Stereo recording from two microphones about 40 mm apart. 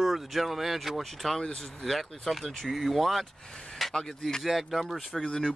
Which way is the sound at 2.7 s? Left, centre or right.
Centre.